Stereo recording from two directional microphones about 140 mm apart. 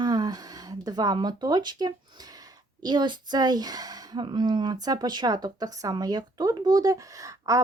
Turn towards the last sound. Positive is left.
turn(degrees=-25)  # may be behind; listen again after turning